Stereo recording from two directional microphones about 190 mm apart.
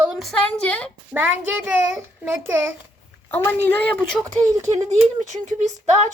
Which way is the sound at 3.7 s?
10° left (ahead or behind).